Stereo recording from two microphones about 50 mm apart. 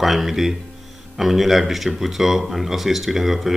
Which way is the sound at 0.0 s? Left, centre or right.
Centre.